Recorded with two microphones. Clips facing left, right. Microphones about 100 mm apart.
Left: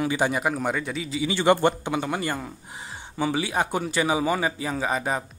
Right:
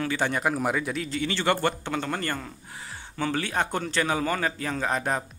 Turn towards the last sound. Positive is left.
turn(degrees=5)  # may be behind; listen again after turning